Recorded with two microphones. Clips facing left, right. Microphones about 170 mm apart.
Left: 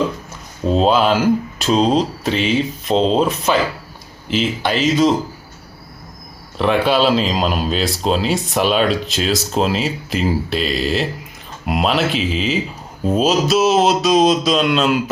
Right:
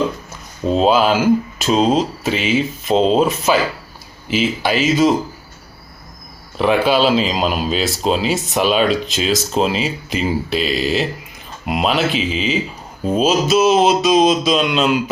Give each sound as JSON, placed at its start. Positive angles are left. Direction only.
{"t": 0.6, "sound": "speech", "side_deg": 0}
{"t": 6.6, "sound": "speech", "side_deg": -5}